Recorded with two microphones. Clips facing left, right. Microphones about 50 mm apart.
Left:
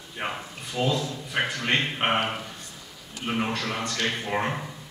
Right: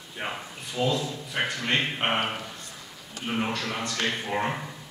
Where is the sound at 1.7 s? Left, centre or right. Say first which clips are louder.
Left 2 dB; centre.